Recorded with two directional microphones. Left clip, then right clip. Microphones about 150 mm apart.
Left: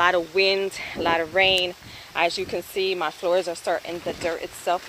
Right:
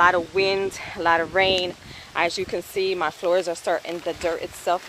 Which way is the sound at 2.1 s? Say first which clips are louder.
Even; 10° right (ahead or behind).